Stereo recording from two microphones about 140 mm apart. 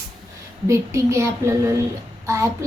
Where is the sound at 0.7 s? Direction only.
20° right (ahead or behind).